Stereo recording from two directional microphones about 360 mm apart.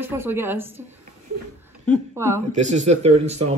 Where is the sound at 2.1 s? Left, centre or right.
Centre.